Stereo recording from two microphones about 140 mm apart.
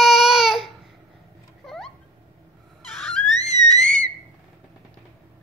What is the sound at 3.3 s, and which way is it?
Music, 55° left (ahead or behind).